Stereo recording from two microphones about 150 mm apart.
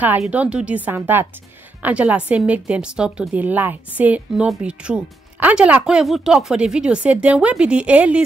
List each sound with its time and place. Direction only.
0.2 s a woman's voice: 10° right (ahead or behind)